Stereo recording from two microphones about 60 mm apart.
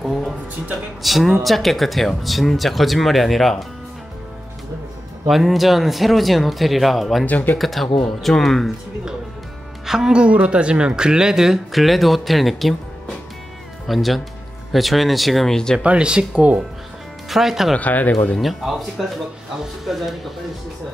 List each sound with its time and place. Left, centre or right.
0.0 s music: centre
1.0 s speech: centre
5.3 s speech: centre
7.2 s speech: left
7.5 s speech: centre
9.8 s speech: centre
13.8 s speech: centre
15.8 s speech: centre
17.3 s speech: centre
17.7 s speech: left
18.4 s speech: centre